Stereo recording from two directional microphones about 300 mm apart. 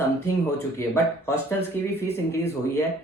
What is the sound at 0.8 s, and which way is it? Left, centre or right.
Speech, centre.